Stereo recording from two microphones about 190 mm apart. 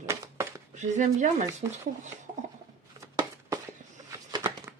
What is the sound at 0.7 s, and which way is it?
Speech, 40° right (ahead or behind).